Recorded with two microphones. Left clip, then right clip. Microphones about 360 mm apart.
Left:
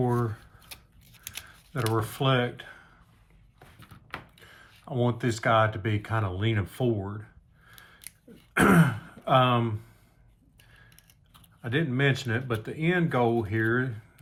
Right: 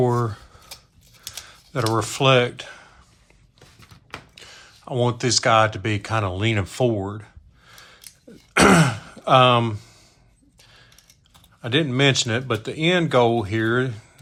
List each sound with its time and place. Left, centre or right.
0.0 s speech: centre
1.7 s speech: centre
4.1 s speech: centre
7.7 s gasp: centre
8.5 s throat clearing: centre
11.6 s speech: centre